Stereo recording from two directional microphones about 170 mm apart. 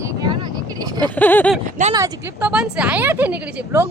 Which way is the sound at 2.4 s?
5° right (ahead or behind).